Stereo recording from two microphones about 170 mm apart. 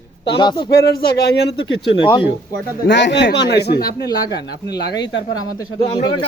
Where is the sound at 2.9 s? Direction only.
90° left; by 3.9 s 70° left (ahead or behind).